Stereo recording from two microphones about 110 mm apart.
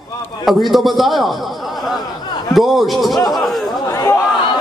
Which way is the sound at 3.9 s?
25° left (ahead or behind).